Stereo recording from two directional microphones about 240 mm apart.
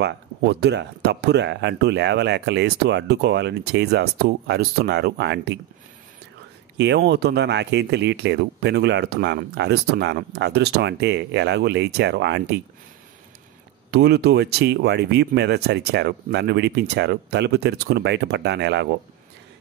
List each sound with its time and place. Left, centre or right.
0.0 s speech: right
6.8 s speech: right
13.8 s speech: right